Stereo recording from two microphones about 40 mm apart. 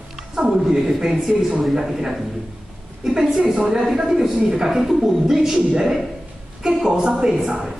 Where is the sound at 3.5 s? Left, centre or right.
Centre.